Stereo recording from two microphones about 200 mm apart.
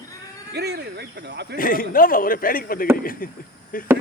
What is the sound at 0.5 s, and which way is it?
Speech, 55° right (ahead or behind).